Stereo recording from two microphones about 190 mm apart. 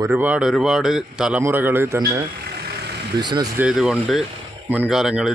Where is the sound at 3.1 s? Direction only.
20° right (ahead or behind).